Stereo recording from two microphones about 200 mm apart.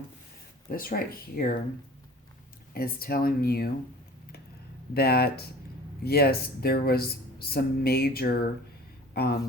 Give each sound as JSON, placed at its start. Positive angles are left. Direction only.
{"t": 0.7, "sound": "speech", "side_deg": 45}
{"t": 2.7, "sound": "speech", "side_deg": 45}
{"t": 4.9, "sound": "speech", "side_deg": 50}